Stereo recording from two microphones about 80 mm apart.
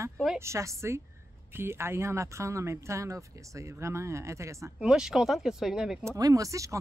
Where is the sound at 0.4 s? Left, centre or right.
Right.